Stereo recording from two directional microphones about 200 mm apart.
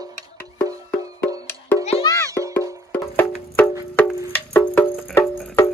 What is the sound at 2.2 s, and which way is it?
Music, 15° right (ahead or behind).